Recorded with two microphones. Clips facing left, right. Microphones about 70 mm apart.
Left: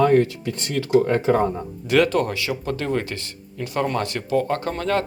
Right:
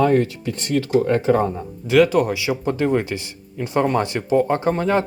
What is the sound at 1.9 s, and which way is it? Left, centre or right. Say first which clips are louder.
Speech: right 3 dB; centre.